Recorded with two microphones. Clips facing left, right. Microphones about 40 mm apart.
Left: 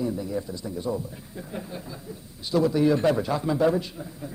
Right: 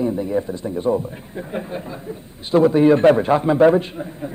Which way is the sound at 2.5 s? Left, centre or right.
Right.